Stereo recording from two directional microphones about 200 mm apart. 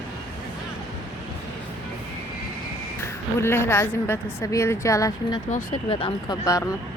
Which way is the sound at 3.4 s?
10° left (ahead or behind).